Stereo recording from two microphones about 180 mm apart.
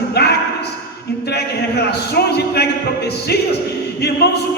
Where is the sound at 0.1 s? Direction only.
65° left (ahead or behind).